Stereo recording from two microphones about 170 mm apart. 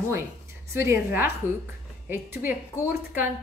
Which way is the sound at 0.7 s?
15° right (ahead or behind).